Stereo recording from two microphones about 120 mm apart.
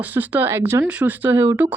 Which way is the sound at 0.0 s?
15° right (ahead or behind).